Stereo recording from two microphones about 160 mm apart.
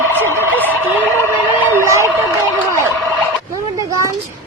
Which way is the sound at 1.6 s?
15° right (ahead or behind).